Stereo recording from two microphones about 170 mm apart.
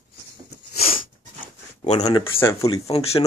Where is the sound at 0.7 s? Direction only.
35° left (ahead or behind).